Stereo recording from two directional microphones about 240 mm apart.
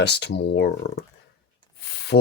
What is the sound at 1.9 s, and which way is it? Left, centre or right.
Rub, left.